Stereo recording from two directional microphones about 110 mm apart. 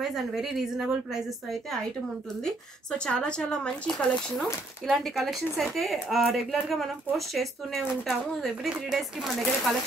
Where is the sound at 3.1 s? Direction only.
10° left (ahead or behind).